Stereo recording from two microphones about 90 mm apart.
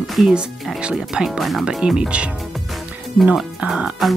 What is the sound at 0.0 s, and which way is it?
Speech, centre (ahead or behind).